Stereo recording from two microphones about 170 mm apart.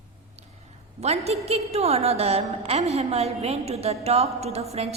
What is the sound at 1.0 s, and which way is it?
A woman's voice, 40° right (ahead or behind).